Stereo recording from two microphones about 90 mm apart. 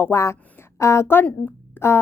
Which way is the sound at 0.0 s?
30° left (ahead or behind).